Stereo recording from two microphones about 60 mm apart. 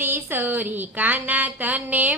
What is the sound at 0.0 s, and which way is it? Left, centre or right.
Speech, right.